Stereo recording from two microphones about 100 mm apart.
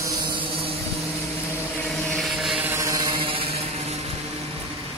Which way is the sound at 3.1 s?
65° right (ahead or behind).